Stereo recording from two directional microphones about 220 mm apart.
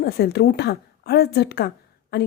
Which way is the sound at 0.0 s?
45° left (ahead or behind).